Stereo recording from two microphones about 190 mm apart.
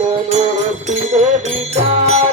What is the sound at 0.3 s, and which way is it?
Music, 35° right (ahead or behind).